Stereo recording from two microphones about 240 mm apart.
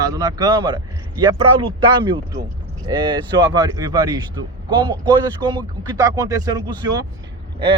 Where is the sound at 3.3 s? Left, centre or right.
Centre.